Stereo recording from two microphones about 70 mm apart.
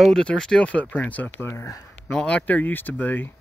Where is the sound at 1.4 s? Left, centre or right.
Left.